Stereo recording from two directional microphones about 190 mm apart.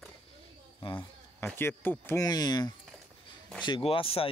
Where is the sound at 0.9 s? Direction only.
10° left (ahead or behind).